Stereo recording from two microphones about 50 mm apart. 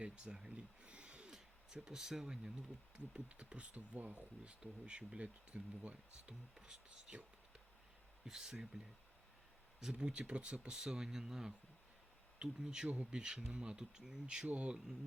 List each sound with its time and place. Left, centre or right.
0.0 s speech: centre; by 4.3 s right
4.4 s speech: right
6.2 s speech: centre
8.2 s speech: centre
9.9 s speech: right